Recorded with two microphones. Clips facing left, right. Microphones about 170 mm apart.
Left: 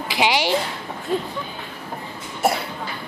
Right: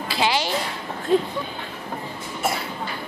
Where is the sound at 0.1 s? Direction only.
15° left (ahead or behind).